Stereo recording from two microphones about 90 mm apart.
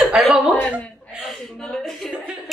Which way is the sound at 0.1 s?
5° right (ahead or behind).